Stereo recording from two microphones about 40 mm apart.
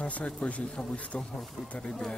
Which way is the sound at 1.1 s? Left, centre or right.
Left.